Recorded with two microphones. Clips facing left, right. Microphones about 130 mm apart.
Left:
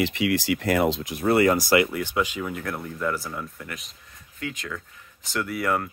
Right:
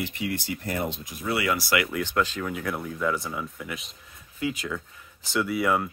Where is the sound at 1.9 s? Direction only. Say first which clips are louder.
Even; 10° left (ahead or behind).